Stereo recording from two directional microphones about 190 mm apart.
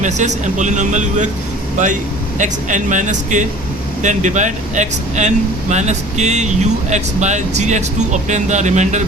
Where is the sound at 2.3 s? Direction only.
40° right (ahead or behind).